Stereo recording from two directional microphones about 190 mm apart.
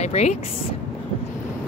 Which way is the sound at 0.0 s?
35° left (ahead or behind).